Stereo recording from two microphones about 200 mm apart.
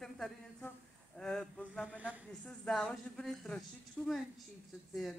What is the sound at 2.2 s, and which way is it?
Speech, 5° left (ahead or behind).